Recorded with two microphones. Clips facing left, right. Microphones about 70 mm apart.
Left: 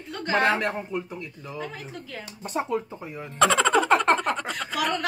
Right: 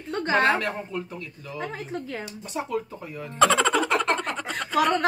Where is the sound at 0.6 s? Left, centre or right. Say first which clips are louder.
Left 2 dB; centre.